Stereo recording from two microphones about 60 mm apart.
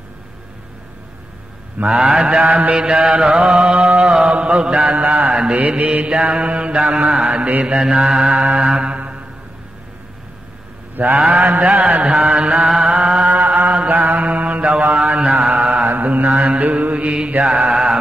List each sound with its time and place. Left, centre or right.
1.9 s mantra: centre
11.0 s mantra: right
12.6 s music: centre
13.3 s mantra: right; by 15.8 s centre
15.8 s mantra: right; by 17.9 s centre